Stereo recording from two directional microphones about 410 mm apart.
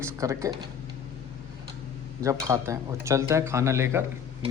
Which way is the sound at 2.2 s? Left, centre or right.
Centre.